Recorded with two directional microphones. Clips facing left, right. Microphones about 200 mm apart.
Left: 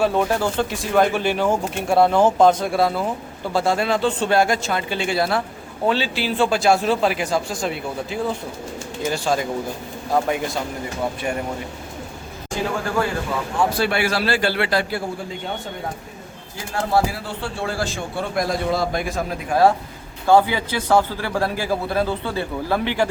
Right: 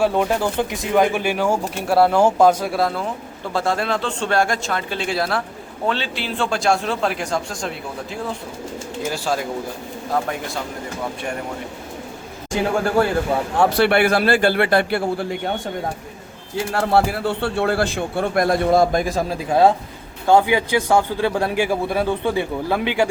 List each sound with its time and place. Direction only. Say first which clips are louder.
0.0 s a man's voice: right 1 dB; 15° right (ahead or behind)
13.6 s speech: right 5 dB; 65° right (ahead or behind)
16.6 s speech: right 3 dB; 65° right (ahead or behind); by 19.5 s 35° right (ahead or behind)
19.5 s speech: right 1 dB; 20° right (ahead or behind)